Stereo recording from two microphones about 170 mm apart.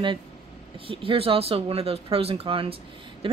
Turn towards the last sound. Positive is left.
turn(degrees=-30)  # may be behind; listen again after turning